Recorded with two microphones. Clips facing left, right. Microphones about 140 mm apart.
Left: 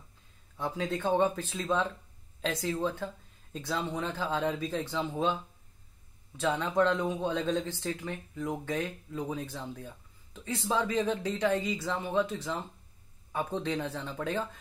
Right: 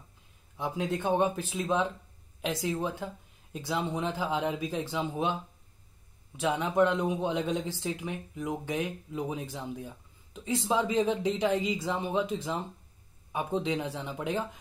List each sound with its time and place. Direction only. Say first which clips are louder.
0.6 s speech: right 1 dB; 10° right (ahead or behind)
6.3 s speech: right 1 dB; 15° right (ahead or behind)